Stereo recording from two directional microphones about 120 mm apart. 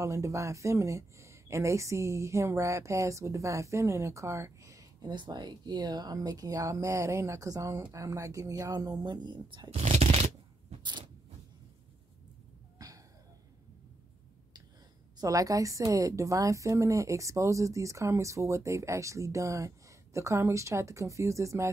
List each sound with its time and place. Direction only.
0.0 s a woman's voice: 25° right (ahead or behind)
5.1 s a woman's voice: 40° right (ahead or behind)
9.7 s shuffling cards: 55° right (ahead or behind)
10.8 s a sound: 40° right (ahead or behind)
12.7 s a sound: 30° right (ahead or behind)
15.1 s a woman's voice: 30° right (ahead or behind)